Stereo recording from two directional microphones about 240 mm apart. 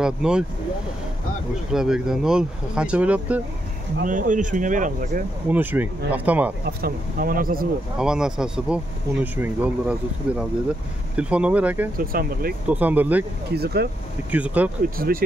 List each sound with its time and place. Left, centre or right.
0.0 s speech: centre
1.7 s speech: centre
4.0 s speech: right
5.5 s speech: centre
6.6 s speech: right
8.0 s speech: centre
12.0 s speech: right
12.6 s speech: centre
13.5 s speech: right
14.3 s speech: centre
15.0 s speech: right